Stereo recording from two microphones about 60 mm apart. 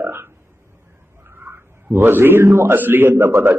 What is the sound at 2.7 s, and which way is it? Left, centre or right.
Speech, right.